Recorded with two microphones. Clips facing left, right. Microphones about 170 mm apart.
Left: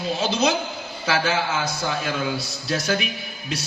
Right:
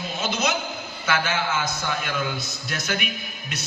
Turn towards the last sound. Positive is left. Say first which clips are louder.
# left 4 dB
turn(degrees=30)  # may be behind; listen again after turning